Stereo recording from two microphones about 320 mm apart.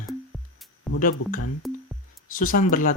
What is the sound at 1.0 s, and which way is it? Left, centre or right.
Speech, left.